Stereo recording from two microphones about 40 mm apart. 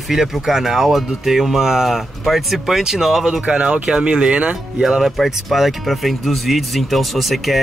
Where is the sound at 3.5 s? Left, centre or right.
Right.